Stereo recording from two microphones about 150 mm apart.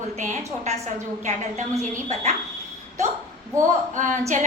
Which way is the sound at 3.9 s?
55° right (ahead or behind).